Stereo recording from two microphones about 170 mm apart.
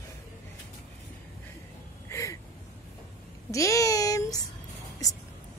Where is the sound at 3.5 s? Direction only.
20° left (ahead or behind).